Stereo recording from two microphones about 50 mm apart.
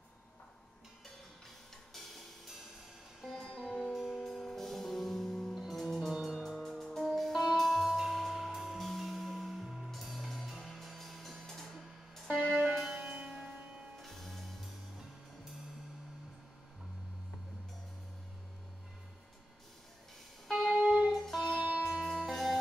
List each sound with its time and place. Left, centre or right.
3.3 s music: centre
3.9 s music: centre
13.1 s music: right
14.0 s music: centre
20.4 s music: centre